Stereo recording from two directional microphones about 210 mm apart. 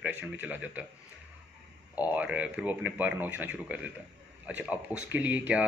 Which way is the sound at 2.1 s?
5° right (ahead or behind).